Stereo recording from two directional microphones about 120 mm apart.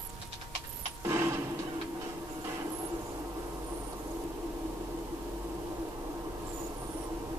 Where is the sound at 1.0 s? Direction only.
25° right (ahead or behind).